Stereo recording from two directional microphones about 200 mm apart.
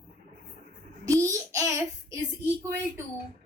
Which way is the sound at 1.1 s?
15° right (ahead or behind).